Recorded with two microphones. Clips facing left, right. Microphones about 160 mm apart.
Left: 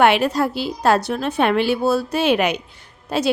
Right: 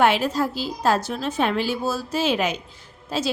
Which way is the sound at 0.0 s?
65° left (ahead or behind).